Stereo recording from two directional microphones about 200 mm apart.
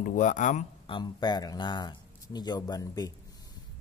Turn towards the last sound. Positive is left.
turn(degrees=20)  # may be behind; listen again after turning